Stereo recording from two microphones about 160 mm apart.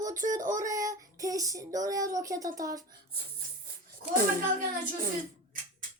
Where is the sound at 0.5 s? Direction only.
20° right (ahead or behind).